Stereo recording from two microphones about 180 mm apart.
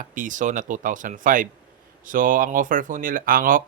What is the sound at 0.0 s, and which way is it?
Speech, 50° right (ahead or behind).